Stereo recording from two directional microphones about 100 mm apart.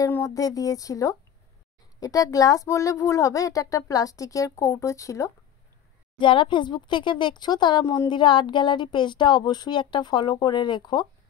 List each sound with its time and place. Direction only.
0.3 s speech: 35° left (ahead or behind)
6.1 s speech: 55° left (ahead or behind)